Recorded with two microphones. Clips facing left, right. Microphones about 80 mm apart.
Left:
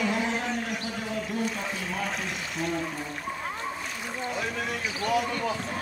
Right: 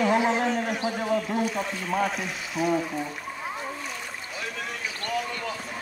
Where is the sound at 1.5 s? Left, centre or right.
Right.